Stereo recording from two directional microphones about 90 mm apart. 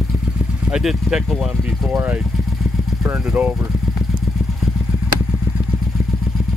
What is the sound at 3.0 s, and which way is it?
Speech, 15° right (ahead or behind).